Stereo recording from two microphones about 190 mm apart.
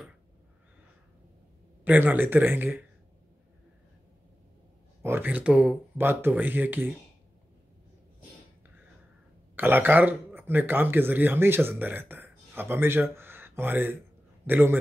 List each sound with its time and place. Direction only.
1.9 s speech: 10° right (ahead or behind)
5.0 s speech: 10° right (ahead or behind)
9.6 s a man's voice: 10° right (ahead or behind)